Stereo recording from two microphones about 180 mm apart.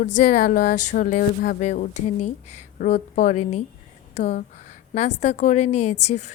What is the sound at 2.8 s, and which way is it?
A woman's voice, 45° left (ahead or behind).